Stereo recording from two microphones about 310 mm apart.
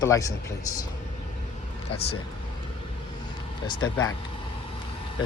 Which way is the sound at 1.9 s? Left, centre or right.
Centre.